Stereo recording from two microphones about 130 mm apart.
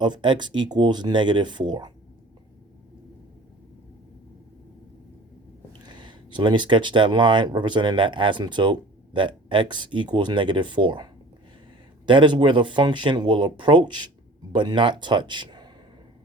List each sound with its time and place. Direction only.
0.0 s speech: 35° right (ahead or behind)
5.8 s speech: 35° right (ahead or behind)